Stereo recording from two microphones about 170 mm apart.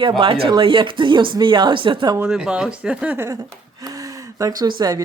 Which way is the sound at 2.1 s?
5° right (ahead or behind).